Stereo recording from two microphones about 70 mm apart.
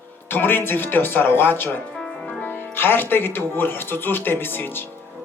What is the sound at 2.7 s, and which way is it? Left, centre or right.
Speech, left.